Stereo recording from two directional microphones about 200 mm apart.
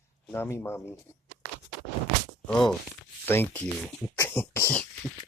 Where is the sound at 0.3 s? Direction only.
10° left (ahead or behind).